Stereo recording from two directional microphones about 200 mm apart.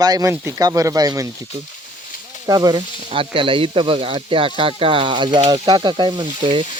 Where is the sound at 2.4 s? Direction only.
20° right (ahead or behind).